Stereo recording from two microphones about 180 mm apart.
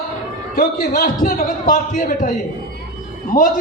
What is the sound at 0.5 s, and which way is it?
A man's voice, 50° left (ahead or behind).